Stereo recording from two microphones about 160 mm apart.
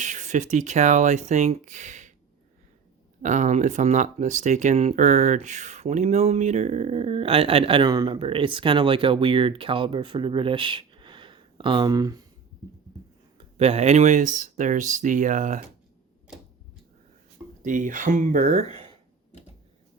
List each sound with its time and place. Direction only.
0.0 s speech: 50° right (ahead or behind)
3.2 s speech: 50° right (ahead or behind); by 12.2 s 25° right (ahead or behind)
13.6 s speech: 40° right (ahead or behind)
17.6 s speech: 55° right (ahead or behind)